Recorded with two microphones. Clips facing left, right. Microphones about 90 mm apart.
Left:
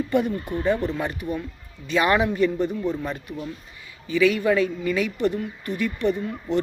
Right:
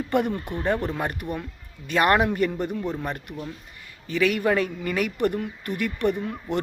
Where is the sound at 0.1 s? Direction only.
65° right (ahead or behind).